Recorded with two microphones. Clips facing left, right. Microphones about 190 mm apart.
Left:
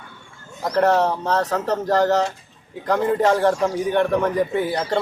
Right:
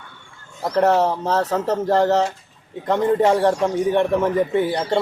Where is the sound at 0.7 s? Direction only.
Centre (ahead or behind).